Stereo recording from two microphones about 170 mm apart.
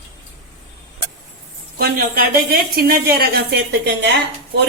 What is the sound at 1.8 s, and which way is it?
A woman's voice, 60° right (ahead or behind).